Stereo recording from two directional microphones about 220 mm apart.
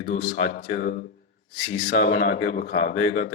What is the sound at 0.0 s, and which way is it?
Speech, 40° left (ahead or behind).